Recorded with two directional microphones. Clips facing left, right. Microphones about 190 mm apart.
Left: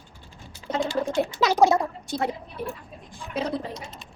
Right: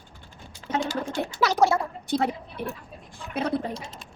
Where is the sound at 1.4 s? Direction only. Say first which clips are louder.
Left 2 dB; 15° left (ahead or behind).